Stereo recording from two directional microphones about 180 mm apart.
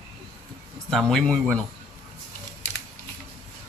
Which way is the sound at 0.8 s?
5° left (ahead or behind).